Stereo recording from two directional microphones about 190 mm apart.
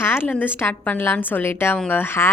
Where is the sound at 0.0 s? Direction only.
10° left (ahead or behind).